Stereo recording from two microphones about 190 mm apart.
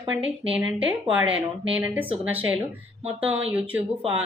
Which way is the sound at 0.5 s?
10° right (ahead or behind).